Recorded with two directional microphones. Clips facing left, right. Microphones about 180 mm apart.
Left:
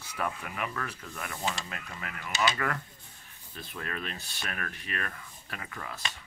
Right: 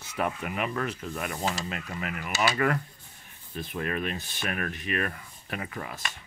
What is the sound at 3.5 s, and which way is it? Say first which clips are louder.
Speech: right 7 dB; 15° right (ahead or behind).